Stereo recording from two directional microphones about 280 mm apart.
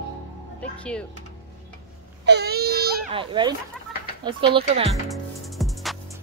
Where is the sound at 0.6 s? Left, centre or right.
Centre.